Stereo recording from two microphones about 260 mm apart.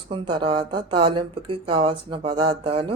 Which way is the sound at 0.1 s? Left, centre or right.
Centre.